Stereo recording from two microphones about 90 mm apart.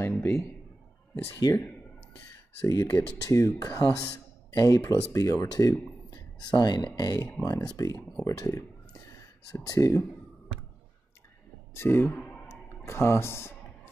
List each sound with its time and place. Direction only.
0.2 s a man's voice: 25° left (ahead or behind)
1.4 s speech: 40° left (ahead or behind)
2.6 s speech: 40° left (ahead or behind)
6.0 s a sound: 50° left (ahead or behind)
7.0 s speech: 45° left (ahead or behind)
9.0 s a sound: 40° left (ahead or behind)
11.7 s speech: 25° left (ahead or behind)
12.1 s clicking: 15° left (ahead or behind)
12.4 s clicking: 30° left (ahead or behind)